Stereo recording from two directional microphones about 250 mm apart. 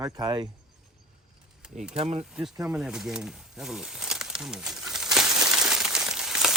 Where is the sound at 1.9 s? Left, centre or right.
Right.